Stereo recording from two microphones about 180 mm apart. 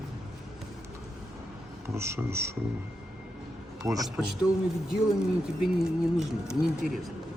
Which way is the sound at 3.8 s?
20° right (ahead or behind).